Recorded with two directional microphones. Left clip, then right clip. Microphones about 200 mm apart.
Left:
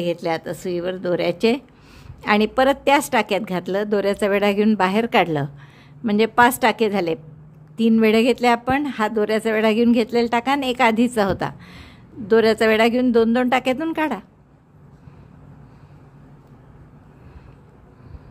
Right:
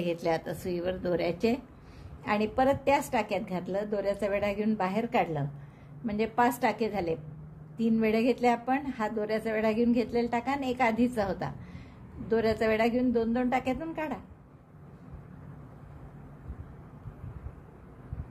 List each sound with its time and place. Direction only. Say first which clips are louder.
0.0 s a woman's voice: left 7 dB; 30° left (ahead or behind)